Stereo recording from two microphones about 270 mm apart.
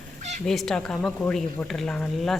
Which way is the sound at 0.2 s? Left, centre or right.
Right.